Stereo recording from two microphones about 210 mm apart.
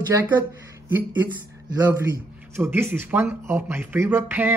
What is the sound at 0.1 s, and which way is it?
Speech, 10° right (ahead or behind).